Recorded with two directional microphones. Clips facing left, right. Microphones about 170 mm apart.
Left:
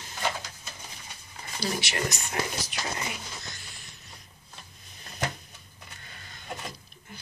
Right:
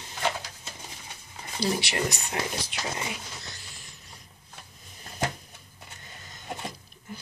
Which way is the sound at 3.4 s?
35° right (ahead or behind).